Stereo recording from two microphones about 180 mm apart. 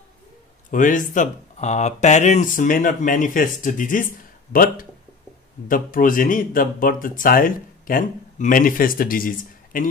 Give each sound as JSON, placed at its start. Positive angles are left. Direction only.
{"t": 0.7, "sound": "speech", "side_deg": 45}